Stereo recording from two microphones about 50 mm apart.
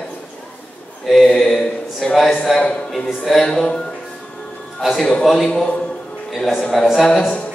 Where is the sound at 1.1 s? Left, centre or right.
Centre.